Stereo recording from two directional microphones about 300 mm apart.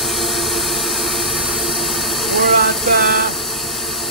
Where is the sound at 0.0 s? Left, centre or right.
Centre.